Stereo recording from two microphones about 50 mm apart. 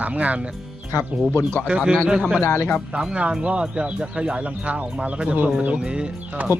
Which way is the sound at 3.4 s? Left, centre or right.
Right.